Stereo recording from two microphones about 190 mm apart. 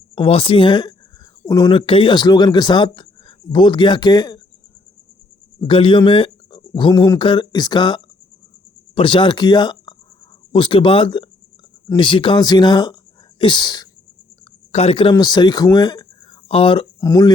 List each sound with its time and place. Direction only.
0.2 s speech: 30° left (ahead or behind)
5.5 s speech: 30° left (ahead or behind)
14.7 s speech: 35° left (ahead or behind)